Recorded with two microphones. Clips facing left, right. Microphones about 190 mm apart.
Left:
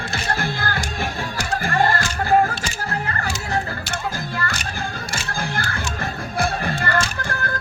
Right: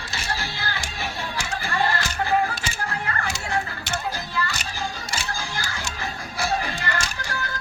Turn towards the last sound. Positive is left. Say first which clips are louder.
# left 4 dB
turn(degrees=55)  # may be behind; listen again after turning